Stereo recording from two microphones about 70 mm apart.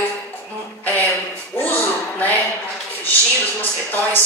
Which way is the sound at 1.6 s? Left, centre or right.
Left.